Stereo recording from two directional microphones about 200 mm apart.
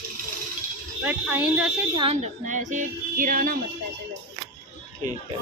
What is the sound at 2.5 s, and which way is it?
Music, 40° right (ahead or behind).